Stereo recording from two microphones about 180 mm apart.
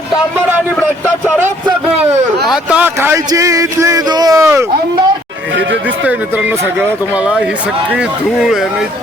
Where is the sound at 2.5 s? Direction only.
5° right (ahead or behind).